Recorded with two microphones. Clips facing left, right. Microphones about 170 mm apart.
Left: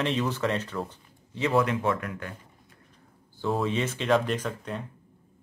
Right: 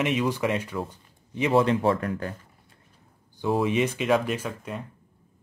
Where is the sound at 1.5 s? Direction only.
30° right (ahead or behind).